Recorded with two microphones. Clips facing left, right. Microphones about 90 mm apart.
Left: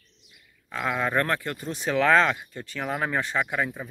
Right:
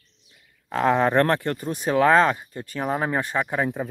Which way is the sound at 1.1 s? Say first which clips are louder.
Right 5 dB; 50° right (ahead or behind).